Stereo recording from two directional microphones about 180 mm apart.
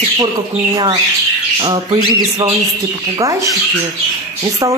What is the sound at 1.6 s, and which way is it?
Speech, 25° right (ahead or behind).